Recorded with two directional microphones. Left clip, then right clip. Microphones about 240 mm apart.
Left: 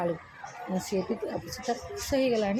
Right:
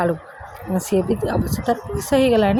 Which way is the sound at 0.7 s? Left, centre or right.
Right.